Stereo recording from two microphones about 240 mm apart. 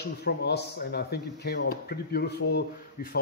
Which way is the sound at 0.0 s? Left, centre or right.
Left.